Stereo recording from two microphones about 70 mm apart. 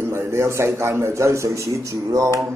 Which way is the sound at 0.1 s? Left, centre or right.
Right.